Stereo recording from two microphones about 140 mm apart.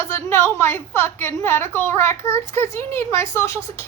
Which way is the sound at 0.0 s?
20° left (ahead or behind).